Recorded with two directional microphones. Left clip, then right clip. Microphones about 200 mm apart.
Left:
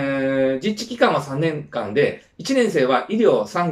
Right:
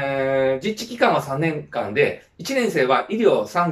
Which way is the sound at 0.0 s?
5° left (ahead or behind).